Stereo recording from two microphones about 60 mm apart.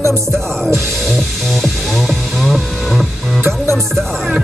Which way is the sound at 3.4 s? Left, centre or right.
Right.